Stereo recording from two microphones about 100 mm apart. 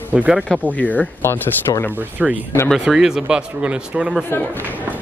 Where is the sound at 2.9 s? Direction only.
5° right (ahead or behind).